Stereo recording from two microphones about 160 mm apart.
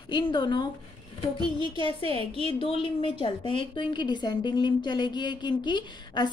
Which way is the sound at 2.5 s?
35° left (ahead or behind).